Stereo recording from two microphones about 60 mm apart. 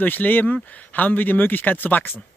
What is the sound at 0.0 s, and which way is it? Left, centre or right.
A man's voice, left.